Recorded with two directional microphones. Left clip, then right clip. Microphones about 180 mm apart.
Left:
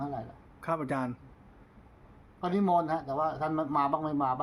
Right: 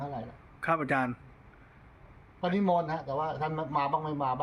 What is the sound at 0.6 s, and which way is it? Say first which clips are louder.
Speech: right 4 dB; 5° left (ahead or behind).